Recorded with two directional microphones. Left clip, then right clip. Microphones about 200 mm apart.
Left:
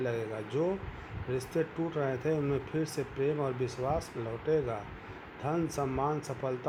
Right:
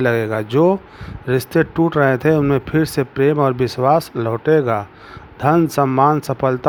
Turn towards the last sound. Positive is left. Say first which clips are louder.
# right 18 dB
turn(degrees=-50)  # may be behind; listen again after turning